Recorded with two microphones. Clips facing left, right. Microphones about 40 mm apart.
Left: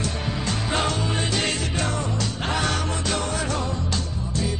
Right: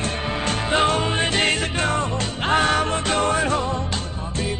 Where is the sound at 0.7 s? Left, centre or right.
Right.